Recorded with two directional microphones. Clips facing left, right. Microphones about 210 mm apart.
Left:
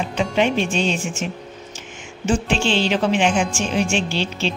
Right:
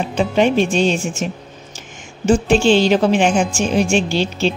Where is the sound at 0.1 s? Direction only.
40° right (ahead or behind).